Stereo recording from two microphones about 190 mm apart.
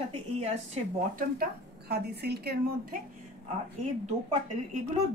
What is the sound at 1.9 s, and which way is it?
Speech, 60° right (ahead or behind).